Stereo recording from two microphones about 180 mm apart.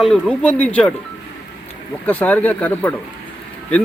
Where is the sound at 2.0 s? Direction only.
10° left (ahead or behind).